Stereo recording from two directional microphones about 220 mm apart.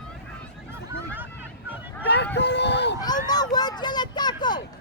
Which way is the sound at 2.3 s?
50° left (ahead or behind).